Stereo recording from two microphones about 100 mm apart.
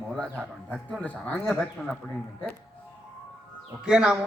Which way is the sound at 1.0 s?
15° left (ahead or behind).